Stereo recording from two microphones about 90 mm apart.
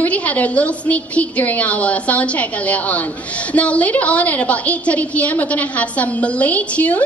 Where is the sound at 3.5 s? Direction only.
15° left (ahead or behind).